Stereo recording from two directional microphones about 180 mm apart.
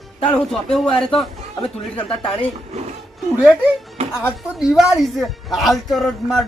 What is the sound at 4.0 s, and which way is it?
Music, 35° right (ahead or behind).